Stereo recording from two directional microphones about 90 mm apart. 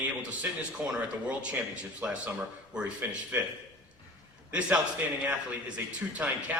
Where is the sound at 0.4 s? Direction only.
20° right (ahead or behind).